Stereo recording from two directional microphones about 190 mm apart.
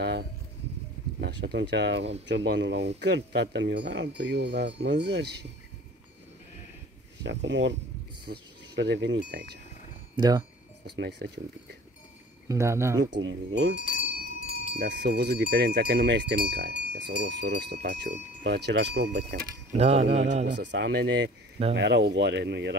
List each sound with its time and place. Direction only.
1.2 s speech: 60° right (ahead or behind)
7.2 s speech: 70° right (ahead or behind)
10.1 s speech: 20° right (ahead or behind)
11.0 s speech: 65° right (ahead or behind)
12.4 s speech: 15° right (ahead or behind)
13.1 s speech: 85° right
14.8 s speech: 60° right (ahead or behind)
19.8 s a sound: 35° right (ahead or behind)
20.4 s speech: 65° right (ahead or behind)